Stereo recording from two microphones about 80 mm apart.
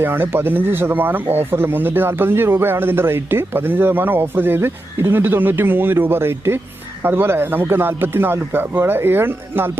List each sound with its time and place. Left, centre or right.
0.0 s speech: right